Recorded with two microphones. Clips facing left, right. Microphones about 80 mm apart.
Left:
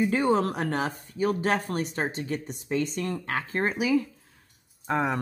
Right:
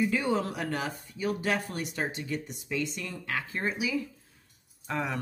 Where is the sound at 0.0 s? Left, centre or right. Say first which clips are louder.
Left 4 dB; left.